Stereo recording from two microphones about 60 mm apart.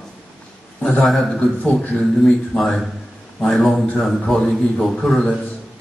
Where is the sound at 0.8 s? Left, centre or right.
Left.